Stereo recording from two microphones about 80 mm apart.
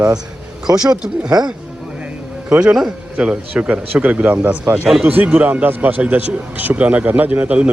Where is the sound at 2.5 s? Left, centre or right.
Centre.